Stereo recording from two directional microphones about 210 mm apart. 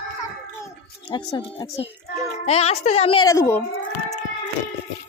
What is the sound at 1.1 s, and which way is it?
A woman's voice, 20° left (ahead or behind).